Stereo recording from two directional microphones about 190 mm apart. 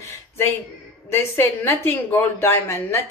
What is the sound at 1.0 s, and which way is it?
A woman's voice, 15° left (ahead or behind).